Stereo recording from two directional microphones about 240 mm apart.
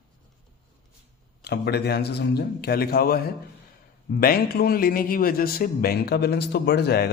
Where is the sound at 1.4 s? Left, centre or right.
Left.